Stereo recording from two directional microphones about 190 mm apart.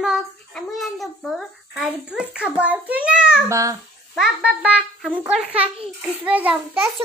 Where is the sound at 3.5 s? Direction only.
15° right (ahead or behind).